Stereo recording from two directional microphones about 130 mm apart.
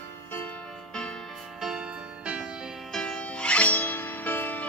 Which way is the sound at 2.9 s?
10° left (ahead or behind).